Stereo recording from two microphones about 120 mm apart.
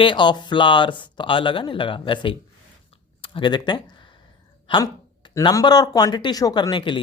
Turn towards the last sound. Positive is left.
turn(degrees=40)  # may be behind; listen again after turning